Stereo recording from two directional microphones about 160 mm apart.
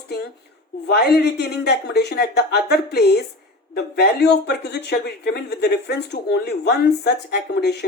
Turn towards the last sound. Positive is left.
turn(degrees=90)